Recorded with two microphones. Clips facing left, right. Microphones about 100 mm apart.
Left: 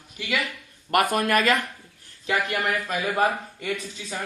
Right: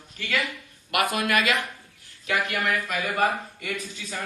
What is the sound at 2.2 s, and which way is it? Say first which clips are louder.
A man's voice: left 1 dB; 25° left (ahead or behind).